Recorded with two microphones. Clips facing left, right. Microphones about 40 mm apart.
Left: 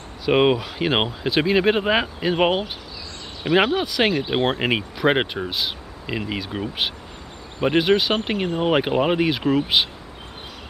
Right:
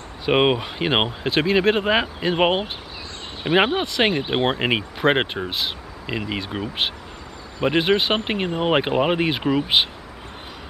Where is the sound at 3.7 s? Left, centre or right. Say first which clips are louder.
Even; centre.